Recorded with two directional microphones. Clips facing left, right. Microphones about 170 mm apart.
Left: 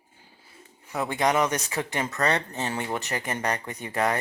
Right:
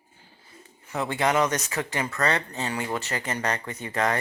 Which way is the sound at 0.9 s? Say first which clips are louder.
Even; 15° left (ahead or behind).